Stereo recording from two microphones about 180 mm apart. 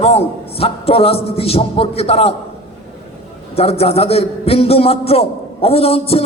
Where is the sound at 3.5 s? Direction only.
35° left (ahead or behind).